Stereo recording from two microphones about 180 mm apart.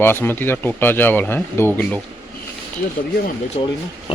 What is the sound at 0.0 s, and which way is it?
Speech, 10° left (ahead or behind).